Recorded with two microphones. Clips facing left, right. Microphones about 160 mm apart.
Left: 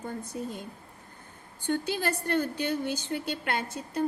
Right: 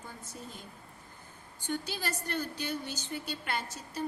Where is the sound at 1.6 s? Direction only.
60° left (ahead or behind).